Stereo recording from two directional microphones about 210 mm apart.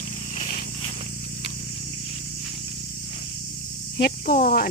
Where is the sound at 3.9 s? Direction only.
45° left (ahead or behind).